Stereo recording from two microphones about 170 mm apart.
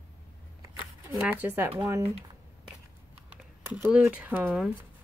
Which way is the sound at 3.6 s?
10° right (ahead or behind).